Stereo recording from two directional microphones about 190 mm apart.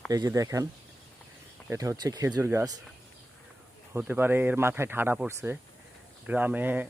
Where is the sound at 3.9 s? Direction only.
10° right (ahead or behind).